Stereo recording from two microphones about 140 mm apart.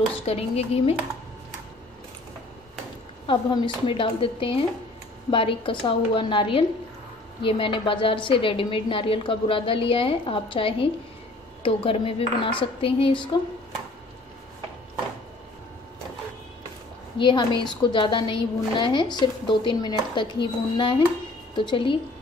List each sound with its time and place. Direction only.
0.1 s speech: 45° left (ahead or behind)
3.3 s a woman's voice: 35° left (ahead or behind)
17.2 s a woman's voice: 35° left (ahead or behind)